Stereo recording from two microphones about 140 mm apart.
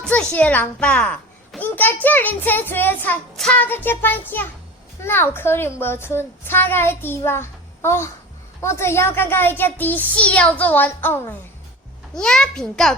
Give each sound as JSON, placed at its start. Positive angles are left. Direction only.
{"t": 0.0, "sound": "a child's voice", "side_deg": 5}